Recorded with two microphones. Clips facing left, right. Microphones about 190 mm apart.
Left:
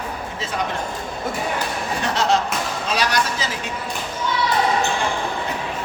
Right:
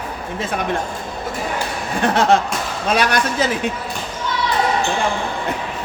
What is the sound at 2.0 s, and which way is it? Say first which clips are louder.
A man's voice: right 5 dB; 55° right (ahead or behind).